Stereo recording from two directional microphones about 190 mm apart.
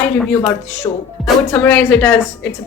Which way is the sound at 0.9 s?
25° left (ahead or behind).